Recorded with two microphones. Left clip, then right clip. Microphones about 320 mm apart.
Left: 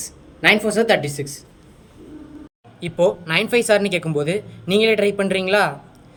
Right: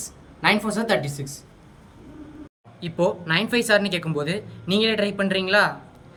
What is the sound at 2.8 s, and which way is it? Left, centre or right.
Speech, centre.